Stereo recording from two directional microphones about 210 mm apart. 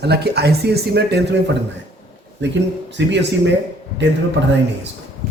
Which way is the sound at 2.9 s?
55° right (ahead or behind).